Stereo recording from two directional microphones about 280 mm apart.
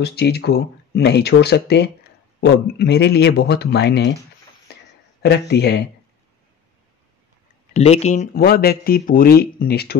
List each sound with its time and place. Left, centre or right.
0.0 s speech: left
5.2 s speech: left
7.7 s speech: left